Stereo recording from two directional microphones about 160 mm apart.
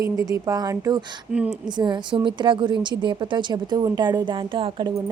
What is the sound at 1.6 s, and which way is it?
Speech, 30° right (ahead or behind).